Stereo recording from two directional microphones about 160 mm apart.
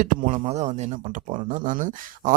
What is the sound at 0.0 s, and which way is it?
Speech, 55° right (ahead or behind).